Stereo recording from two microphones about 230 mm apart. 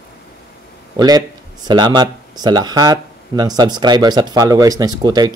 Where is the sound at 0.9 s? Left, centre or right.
Centre.